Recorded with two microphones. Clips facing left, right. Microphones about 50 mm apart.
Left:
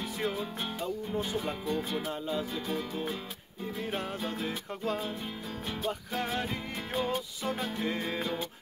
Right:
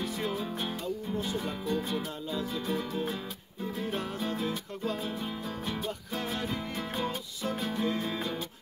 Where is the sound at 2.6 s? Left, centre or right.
Centre.